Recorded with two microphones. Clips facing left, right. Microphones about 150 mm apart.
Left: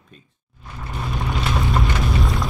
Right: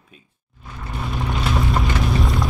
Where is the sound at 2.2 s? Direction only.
Centre (ahead or behind).